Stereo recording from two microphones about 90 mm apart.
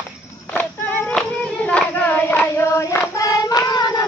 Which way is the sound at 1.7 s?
15° left (ahead or behind).